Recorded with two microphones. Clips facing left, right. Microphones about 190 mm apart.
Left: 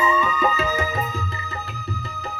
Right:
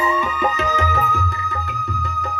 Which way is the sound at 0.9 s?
70° right (ahead or behind).